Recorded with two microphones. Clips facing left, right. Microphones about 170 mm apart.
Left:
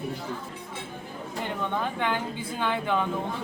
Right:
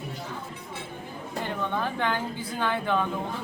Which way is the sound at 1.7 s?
15° left (ahead or behind).